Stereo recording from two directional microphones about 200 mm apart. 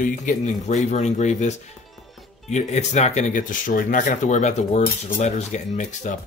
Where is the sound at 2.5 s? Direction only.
35° left (ahead or behind).